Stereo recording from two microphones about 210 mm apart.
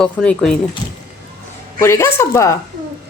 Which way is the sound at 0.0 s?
5° left (ahead or behind).